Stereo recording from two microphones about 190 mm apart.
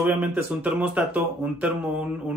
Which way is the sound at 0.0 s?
10° right (ahead or behind).